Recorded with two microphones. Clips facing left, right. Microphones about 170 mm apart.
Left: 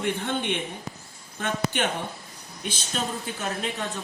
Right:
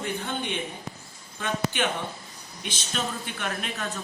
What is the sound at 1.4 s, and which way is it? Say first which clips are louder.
Speech: left 1 dB; 50° left (ahead or behind).